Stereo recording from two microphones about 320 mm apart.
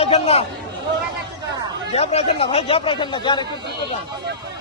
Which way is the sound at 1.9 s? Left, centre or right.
Centre.